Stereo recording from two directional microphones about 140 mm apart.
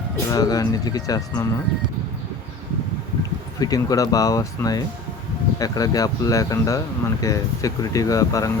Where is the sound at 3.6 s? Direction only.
25° left (ahead or behind).